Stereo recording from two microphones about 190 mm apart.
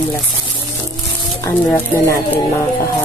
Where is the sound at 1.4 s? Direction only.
15° left (ahead or behind).